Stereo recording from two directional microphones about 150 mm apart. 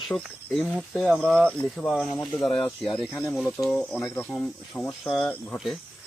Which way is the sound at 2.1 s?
35° left (ahead or behind).